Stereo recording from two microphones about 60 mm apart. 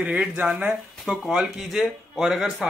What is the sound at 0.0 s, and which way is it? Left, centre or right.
Speech, right.